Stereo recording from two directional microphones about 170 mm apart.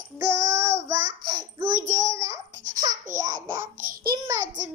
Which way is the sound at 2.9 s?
50° right (ahead or behind).